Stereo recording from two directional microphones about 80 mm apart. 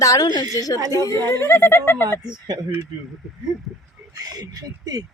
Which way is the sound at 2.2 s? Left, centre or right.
Right.